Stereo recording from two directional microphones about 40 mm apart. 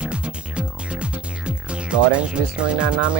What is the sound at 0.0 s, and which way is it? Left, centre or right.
Music, right.